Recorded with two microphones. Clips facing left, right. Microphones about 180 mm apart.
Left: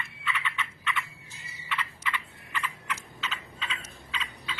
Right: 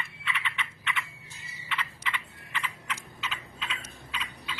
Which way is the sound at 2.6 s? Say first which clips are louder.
Left 1 dB; 10° right (ahead or behind).